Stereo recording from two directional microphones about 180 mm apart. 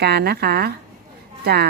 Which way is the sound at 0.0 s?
65° right (ahead or behind).